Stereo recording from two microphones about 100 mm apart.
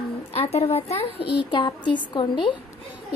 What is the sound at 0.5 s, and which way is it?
Speech, 80° left.